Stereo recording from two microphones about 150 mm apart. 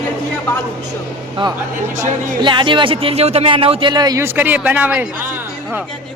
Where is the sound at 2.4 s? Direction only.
30° right (ahead or behind); by 5.8 s 10° right (ahead or behind).